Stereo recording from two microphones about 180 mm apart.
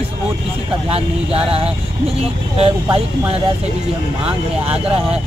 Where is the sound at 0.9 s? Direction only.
35° right (ahead or behind).